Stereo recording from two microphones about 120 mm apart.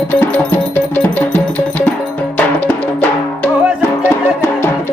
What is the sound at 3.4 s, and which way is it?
Music, 20° left (ahead or behind).